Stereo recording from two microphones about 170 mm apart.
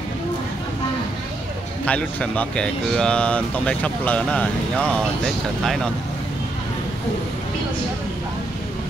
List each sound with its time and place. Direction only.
1.9 s speech: 10° left (ahead or behind)